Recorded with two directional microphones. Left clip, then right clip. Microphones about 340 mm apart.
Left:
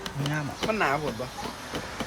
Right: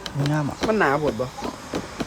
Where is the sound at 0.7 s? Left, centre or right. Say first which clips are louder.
Right 5 dB; right.